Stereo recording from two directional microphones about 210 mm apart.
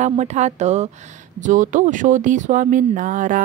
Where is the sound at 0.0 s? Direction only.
35° right (ahead or behind).